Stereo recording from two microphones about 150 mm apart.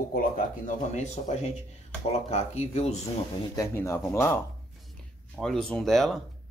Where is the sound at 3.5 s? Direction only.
20° left (ahead or behind).